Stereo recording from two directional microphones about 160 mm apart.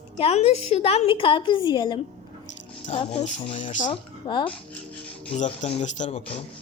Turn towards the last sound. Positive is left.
turn(degrees=40)  # may be behind; listen again after turning